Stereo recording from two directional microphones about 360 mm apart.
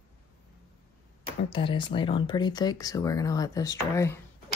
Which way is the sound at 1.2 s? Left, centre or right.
Centre.